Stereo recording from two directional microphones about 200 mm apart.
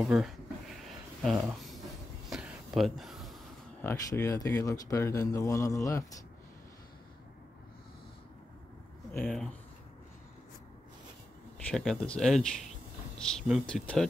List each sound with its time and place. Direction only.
0.0 s speech: centre (ahead or behind)
2.2 s a sound: centre (ahead or behind)
3.8 s speech: 15° left (ahead or behind)
9.1 s speech: 5° left (ahead or behind)
11.5 s speech: 5° left (ahead or behind)